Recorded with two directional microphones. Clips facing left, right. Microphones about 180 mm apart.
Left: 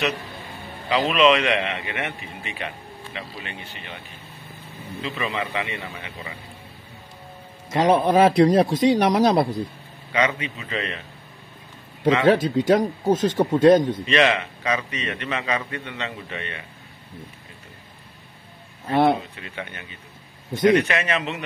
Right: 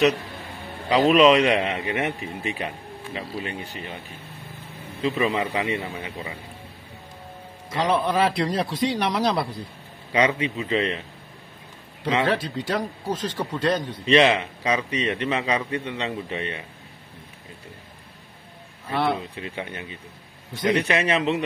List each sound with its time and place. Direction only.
0.8 s a man's voice: 40° right (ahead or behind)
5.1 s a man's voice: 30° right (ahead or behind)
7.7 s speech: 45° left (ahead or behind)
10.1 s a man's voice: 30° right (ahead or behind)
12.3 s speech: 45° left (ahead or behind)
14.0 s a man's voice: 30° right (ahead or behind)
18.9 s speech: 45° left (ahead or behind)
19.3 s a man's voice: 30° right (ahead or behind)